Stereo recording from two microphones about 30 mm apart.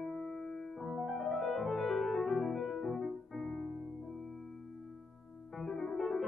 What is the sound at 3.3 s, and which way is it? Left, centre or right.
Music, centre.